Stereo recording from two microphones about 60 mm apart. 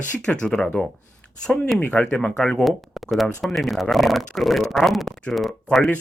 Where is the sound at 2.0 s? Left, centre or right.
Centre.